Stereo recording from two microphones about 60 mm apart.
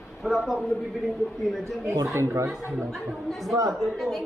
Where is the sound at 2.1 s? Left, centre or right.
Right.